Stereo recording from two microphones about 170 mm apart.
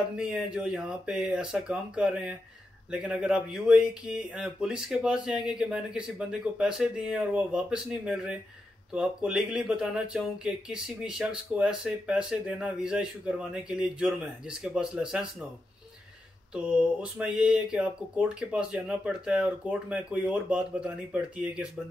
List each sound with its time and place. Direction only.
0.2 s speech: 5° right (ahead or behind)
16.5 s speech: 5° right (ahead or behind)